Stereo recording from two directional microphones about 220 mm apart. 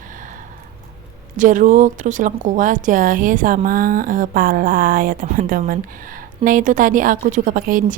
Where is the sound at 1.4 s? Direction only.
35° right (ahead or behind).